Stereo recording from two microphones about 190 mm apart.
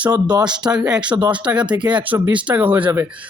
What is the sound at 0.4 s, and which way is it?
Speech, 5° right (ahead or behind).